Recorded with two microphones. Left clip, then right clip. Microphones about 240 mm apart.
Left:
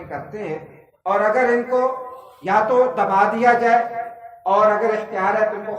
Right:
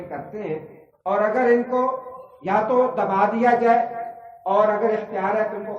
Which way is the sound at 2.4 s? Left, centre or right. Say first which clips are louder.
Left 3 dB; left.